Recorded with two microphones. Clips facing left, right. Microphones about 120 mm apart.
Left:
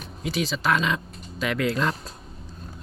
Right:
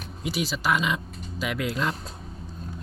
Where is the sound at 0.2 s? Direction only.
10° right (ahead or behind).